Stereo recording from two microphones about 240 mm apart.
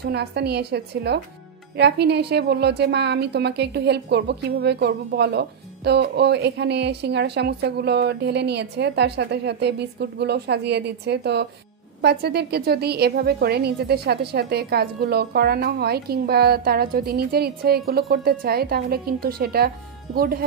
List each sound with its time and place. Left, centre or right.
0.0 s a woman's voice: right